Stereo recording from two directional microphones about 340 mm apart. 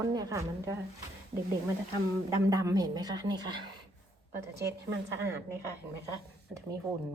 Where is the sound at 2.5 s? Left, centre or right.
Centre.